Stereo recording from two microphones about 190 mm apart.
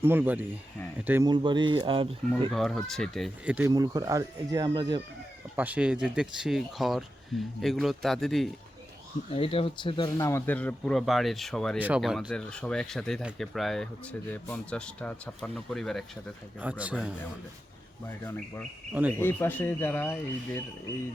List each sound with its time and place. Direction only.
0.0 s speech: 10° right (ahead or behind)
1.3 s speech: 25° right (ahead or behind)
2.5 s speech: centre (ahead or behind)
3.7 s speech: 20° right (ahead or behind)
5.5 s speech: 10° right (ahead or behind)
9.3 s speech: 30° left (ahead or behind); by 17.2 s 5° right (ahead or behind)
18.3 s speech: 15° left (ahead or behind)